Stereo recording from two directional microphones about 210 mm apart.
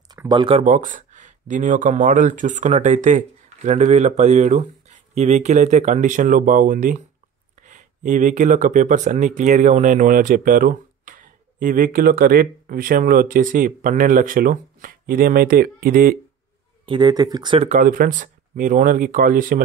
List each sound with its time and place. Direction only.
0.1 s speech: 20° right (ahead or behind); by 16.2 s 45° right (ahead or behind)
16.8 s speech: 20° right (ahead or behind)
17.6 s speech: 40° right (ahead or behind)